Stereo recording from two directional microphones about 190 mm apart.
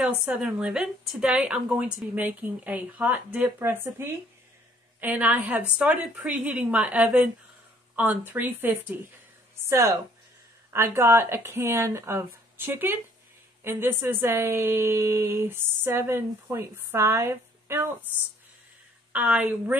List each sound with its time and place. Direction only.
0.3 s a woman's voice: 5° right (ahead or behind)
19.1 s a woman's voice: 5° right (ahead or behind)